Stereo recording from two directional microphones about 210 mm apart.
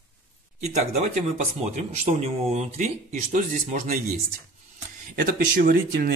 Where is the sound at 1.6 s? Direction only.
30° right (ahead or behind).